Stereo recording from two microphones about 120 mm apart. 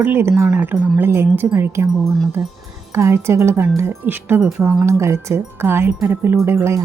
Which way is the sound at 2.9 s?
20° right (ahead or behind).